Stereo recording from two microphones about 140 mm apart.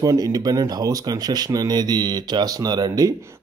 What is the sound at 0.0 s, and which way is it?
Speech, 25° right (ahead or behind).